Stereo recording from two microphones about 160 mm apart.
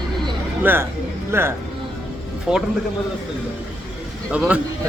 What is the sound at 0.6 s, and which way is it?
Speech, 15° right (ahead or behind).